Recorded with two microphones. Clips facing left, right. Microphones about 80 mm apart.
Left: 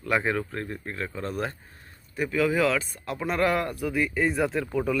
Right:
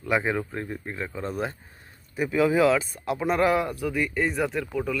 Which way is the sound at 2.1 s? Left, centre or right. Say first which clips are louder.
Right 3 dB; centre.